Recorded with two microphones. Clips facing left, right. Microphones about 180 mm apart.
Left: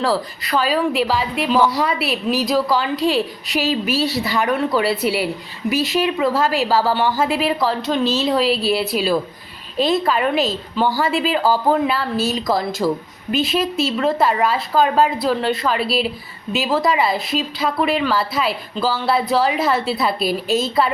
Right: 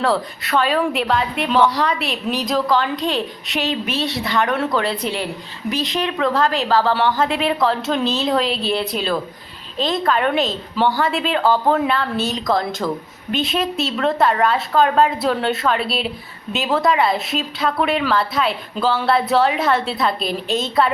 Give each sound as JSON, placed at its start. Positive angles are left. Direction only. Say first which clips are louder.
{"t": 0.0, "sound": "a woman's voice", "louder": "even", "side_deg": 0}